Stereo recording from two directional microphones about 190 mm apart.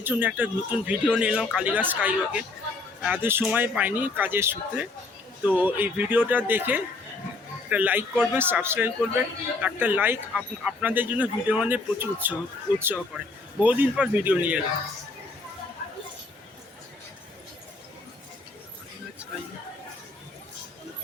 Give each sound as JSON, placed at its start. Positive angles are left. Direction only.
{"t": 0.0, "sound": "speech", "side_deg": -10}